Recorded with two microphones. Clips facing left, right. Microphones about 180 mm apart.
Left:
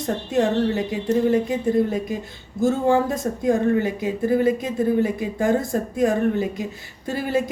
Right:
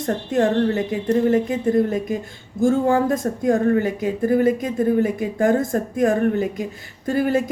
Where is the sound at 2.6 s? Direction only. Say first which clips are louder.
Right 2 dB; 50° right (ahead or behind).